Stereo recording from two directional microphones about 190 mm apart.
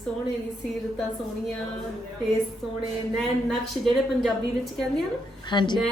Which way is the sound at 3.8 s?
Centre (ahead or behind).